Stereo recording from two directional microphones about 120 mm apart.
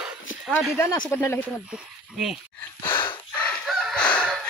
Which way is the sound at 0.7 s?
20° left (ahead or behind).